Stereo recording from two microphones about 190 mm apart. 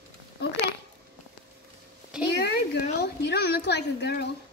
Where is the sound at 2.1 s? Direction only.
5° right (ahead or behind).